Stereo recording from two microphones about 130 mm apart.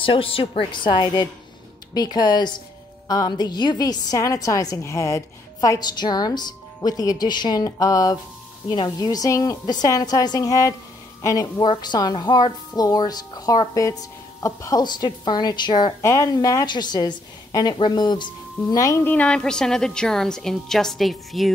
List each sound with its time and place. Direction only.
0.0 s a woman's voice: 45° left (ahead or behind); by 11.6 s 25° left (ahead or behind)
11.6 s a woman's voice: 35° left (ahead or behind)
16.0 s a woman's voice: 25° left (ahead or behind)
18.7 s a woman's voice: 25° left (ahead or behind)
19.0 s a woman's voice: 10° left (ahead or behind)